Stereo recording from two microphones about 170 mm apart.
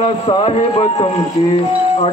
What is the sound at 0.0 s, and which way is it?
Music, 30° left (ahead or behind).